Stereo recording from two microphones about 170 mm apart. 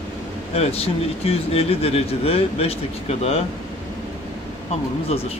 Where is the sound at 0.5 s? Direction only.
35° left (ahead or behind).